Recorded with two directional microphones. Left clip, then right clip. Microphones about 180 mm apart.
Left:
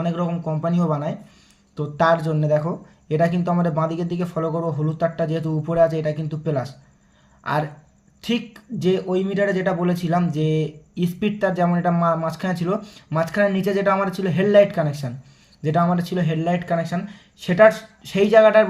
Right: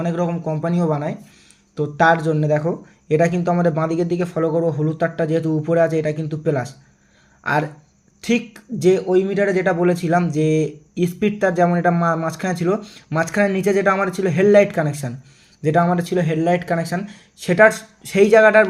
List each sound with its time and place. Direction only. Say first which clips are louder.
0.0 s speech: right 3 dB; 15° right (ahead or behind)